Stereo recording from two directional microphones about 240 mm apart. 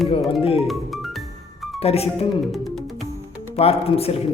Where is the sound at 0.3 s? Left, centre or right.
Left.